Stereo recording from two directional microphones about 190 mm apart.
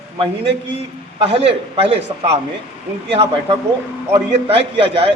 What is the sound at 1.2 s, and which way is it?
Speech, 30° right (ahead or behind).